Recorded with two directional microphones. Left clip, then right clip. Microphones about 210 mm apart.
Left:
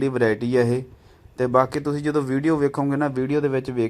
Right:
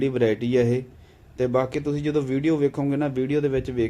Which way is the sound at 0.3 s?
60° left (ahead or behind).